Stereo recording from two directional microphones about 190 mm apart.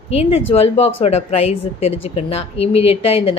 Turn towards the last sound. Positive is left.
turn(degrees=30)  # may be behind; listen again after turning